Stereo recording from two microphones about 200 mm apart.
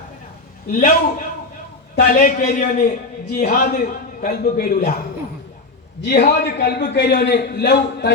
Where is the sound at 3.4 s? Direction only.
45° left (ahead or behind).